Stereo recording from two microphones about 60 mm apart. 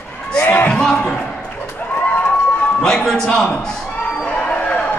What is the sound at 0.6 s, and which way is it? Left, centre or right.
Speech, centre.